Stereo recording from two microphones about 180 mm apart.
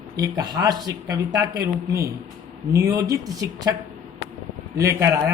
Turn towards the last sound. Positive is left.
turn(degrees=-15)  # may be behind; listen again after turning